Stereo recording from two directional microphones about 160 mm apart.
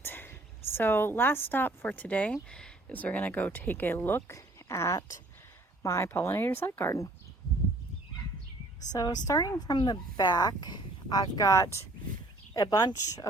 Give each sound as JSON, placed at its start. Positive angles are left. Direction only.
{"t": 0.0, "sound": "a sound", "side_deg": 10}
{"t": 0.7, "sound": "speech", "side_deg": 15}
{"t": 8.9, "sound": "speech", "side_deg": 25}